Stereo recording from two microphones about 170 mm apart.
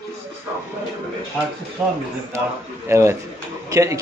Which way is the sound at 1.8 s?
5° right (ahead or behind).